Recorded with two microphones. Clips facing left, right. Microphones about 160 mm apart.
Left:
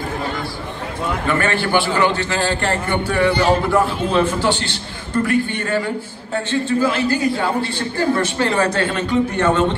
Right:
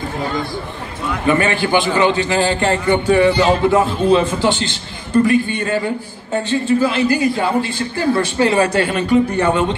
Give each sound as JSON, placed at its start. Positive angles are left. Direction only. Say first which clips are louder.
{"t": 1.2, "sound": "a man's voice", "louder": "right 5 dB", "side_deg": -15}